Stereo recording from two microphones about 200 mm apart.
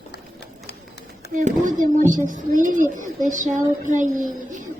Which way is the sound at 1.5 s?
40° right (ahead or behind).